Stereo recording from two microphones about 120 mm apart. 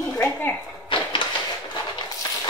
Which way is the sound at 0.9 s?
45° left (ahead or behind).